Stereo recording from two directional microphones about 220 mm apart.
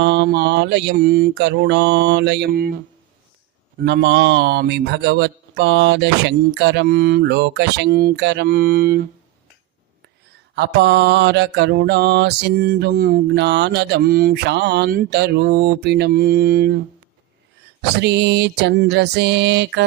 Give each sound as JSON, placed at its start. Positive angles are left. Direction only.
{"t": 0.0, "sound": "mantra", "side_deg": -50}
{"t": 10.5, "sound": "mantra", "side_deg": -50}
{"t": 18.0, "sound": "mantra", "side_deg": -50}